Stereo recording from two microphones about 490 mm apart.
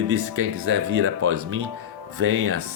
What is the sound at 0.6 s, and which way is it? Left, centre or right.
Speech, right.